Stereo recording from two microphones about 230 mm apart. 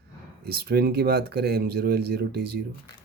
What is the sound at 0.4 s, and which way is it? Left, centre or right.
Speech, right.